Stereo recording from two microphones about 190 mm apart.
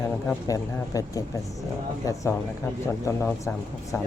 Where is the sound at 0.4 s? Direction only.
20° left (ahead or behind).